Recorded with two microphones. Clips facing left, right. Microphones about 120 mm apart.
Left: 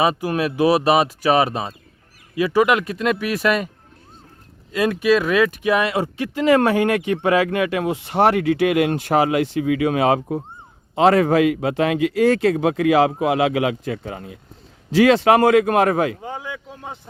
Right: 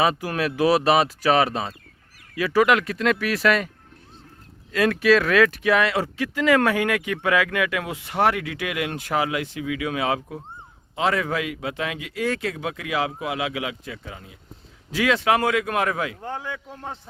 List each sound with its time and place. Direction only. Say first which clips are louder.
0.0 s speech: left 3 dB; 20° left (ahead or behind)
4.7 s speech: left 1 dB; 15° left (ahead or behind); by 8.6 s 35° left (ahead or behind)
8.6 s speech: left 9 dB; 45° left (ahead or behind)
9.0 s speech: left 7 dB; 35° left (ahead or behind)
11.9 s speech: left 10 dB; 60° left (ahead or behind)
14.9 s speech: left 7 dB; 35° left (ahead or behind)
16.2 s a man's voice: left 1 dB; 10° left (ahead or behind)